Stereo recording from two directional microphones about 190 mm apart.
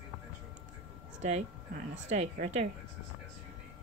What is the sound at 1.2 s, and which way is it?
Speech, 35° right (ahead or behind).